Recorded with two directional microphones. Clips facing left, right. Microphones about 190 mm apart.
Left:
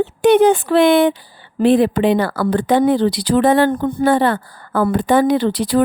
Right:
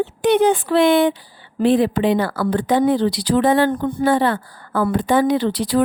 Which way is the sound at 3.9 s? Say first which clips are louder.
Left 2 dB; 50° left (ahead or behind).